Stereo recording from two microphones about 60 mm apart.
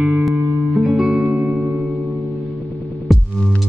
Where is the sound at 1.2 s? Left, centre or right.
Right.